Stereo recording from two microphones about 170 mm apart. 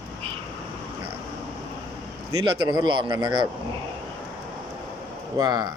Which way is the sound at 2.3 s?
25° right (ahead or behind).